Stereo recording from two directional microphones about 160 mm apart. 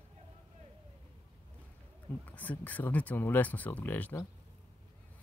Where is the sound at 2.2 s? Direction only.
10° left (ahead or behind).